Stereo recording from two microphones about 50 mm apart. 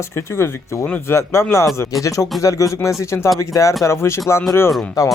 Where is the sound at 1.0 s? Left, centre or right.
Left.